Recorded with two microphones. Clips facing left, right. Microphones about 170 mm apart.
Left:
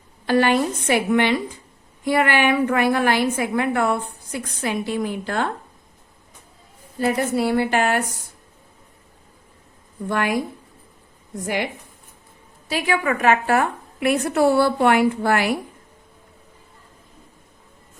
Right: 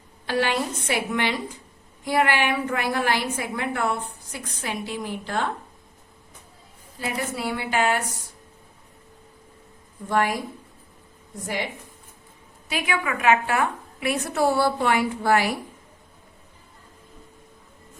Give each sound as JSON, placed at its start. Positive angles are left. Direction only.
{"t": 0.3, "sound": "a woman's voice", "side_deg": 50}
{"t": 7.0, "sound": "a woman's voice", "side_deg": 40}
{"t": 10.1, "sound": "a woman's voice", "side_deg": 70}
{"t": 12.6, "sound": "a woman's voice", "side_deg": 35}